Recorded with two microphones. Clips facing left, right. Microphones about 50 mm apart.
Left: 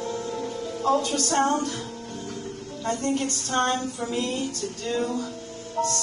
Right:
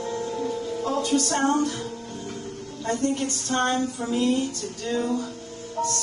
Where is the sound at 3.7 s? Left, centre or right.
Centre.